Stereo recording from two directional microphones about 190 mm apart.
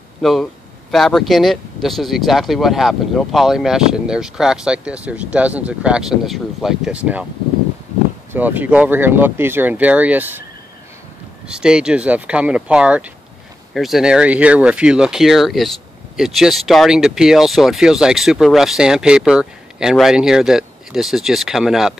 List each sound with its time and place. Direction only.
0.2 s speech: centre (ahead or behind)
8.3 s speech: 10° right (ahead or behind)
11.4 s speech: 5° right (ahead or behind)